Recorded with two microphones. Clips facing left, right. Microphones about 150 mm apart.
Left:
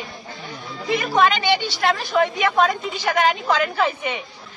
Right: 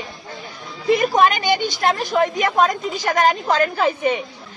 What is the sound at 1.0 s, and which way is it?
A woman's voice, 45° right (ahead or behind).